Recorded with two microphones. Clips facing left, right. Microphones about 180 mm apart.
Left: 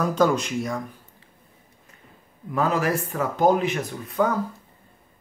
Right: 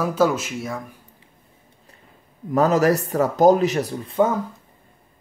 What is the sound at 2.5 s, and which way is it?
Speech, 40° right (ahead or behind).